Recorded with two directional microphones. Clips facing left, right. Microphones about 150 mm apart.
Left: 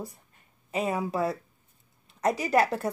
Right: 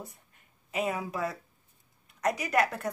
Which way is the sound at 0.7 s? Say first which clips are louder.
Left 3 dB; 30° left (ahead or behind).